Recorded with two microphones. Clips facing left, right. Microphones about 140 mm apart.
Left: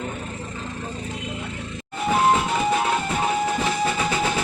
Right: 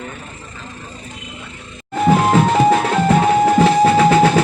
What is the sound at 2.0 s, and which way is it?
Music, 75° right (ahead or behind).